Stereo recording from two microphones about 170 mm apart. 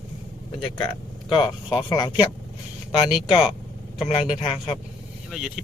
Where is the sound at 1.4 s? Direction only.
20° left (ahead or behind).